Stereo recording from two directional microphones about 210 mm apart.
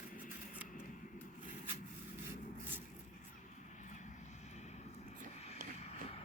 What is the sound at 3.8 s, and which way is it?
Vehicle, 35° left (ahead or behind).